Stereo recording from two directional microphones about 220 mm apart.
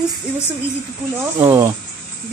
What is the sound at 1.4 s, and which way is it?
Speech, 10° right (ahead or behind).